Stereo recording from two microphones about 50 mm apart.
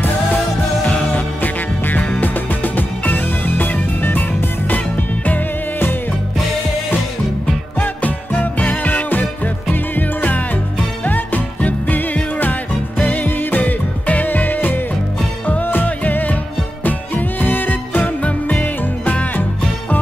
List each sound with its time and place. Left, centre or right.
0.8 s music: left
7.8 s music: left